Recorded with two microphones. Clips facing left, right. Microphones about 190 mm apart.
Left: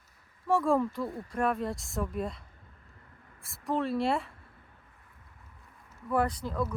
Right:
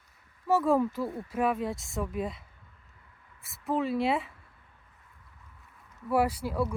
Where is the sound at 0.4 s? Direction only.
5° right (ahead or behind).